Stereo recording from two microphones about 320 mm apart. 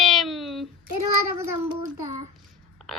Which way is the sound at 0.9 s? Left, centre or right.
Right.